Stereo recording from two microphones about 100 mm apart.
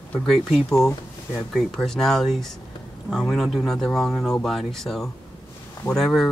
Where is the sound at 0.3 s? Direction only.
Centre (ahead or behind).